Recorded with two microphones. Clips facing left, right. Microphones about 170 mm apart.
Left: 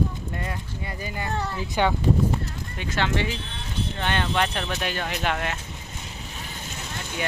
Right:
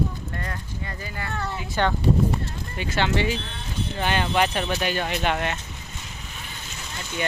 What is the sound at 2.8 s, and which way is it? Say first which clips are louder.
Speech: right 2 dB; centre (ahead or behind).